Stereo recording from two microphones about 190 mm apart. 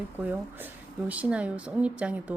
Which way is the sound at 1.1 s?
5° right (ahead or behind).